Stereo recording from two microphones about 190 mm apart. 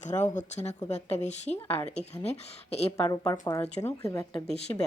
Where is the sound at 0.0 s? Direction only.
40° left (ahead or behind).